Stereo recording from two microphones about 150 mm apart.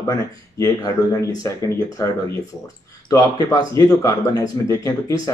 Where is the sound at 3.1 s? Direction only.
20° left (ahead or behind).